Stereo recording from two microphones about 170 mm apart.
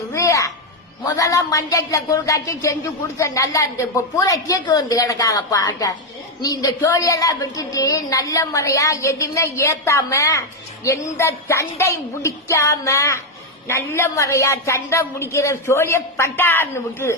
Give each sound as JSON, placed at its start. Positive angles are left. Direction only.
{"t": 0.1, "sound": "music", "side_deg": 20}
{"t": 1.1, "sound": "a woman's voice", "side_deg": 20}